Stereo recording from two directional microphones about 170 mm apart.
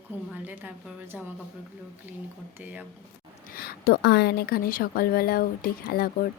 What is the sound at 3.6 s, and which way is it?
A woman's voice, 65° left (ahead or behind).